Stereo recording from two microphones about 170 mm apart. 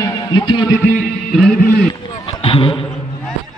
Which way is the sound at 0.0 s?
20° left (ahead or behind).